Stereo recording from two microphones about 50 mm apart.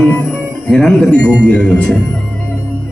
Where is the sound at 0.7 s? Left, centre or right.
Centre.